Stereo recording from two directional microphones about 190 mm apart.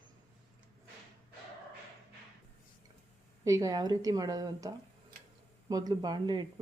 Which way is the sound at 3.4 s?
15° right (ahead or behind).